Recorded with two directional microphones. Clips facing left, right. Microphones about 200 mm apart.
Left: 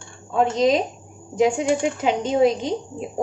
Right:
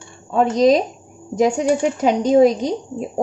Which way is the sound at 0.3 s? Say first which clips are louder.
Right 4 dB; 40° right (ahead or behind).